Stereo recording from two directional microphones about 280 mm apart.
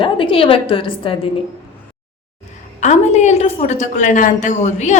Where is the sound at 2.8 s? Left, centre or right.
Left.